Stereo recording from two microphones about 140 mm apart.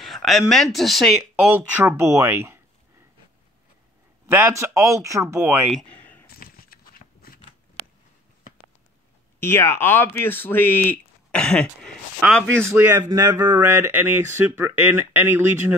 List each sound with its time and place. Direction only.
0.0 s speech: centre (ahead or behind)
1.4 s speech: 15° right (ahead or behind)
4.3 s speech: 15° right (ahead or behind)
5.9 s a sound: 10° left (ahead or behind)
6.2 s a sound: 90° left
9.4 s speech: 20° left (ahead or behind)
12.6 s speech: 15° right (ahead or behind)